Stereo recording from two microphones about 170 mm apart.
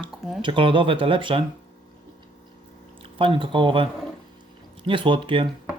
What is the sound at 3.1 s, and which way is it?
Speech, 30° right (ahead or behind).